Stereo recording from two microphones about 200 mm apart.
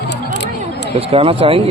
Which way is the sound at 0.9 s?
30° right (ahead or behind).